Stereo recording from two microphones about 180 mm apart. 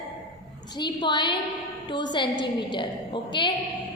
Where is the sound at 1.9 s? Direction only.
25° left (ahead or behind).